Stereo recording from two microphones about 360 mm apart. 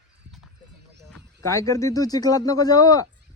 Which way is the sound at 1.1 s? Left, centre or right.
Centre.